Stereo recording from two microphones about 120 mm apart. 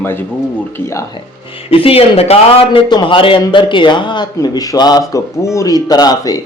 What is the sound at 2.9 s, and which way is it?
A man's voice, 40° left (ahead or behind).